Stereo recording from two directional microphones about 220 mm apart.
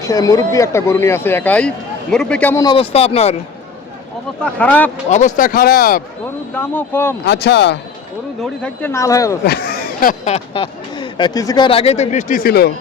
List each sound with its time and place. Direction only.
0.0 s speech: 15° left (ahead or behind)
2.6 s speech: 25° left (ahead or behind)
4.4 s speech: 5° left (ahead or behind)
5.0 s speech: 35° left (ahead or behind)
6.5 s speech: 10° left (ahead or behind)
7.3 s speech: 50° left (ahead or behind)
8.4 s speech: 5° left (ahead or behind)
9.5 s speech: 45° left (ahead or behind)